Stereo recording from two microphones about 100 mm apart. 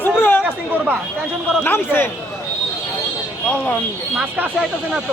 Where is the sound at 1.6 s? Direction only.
20° left (ahead or behind).